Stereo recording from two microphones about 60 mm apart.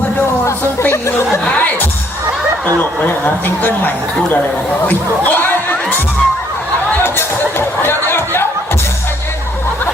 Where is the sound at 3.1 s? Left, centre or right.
Left.